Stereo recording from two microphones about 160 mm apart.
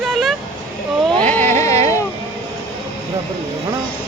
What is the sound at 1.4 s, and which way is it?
Speech, 45° right (ahead or behind).